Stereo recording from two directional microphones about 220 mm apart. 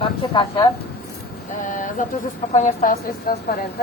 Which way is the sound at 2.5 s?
35° left (ahead or behind).